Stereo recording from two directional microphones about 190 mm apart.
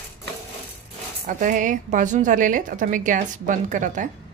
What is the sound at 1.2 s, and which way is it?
A woman's voice, 45° right (ahead or behind).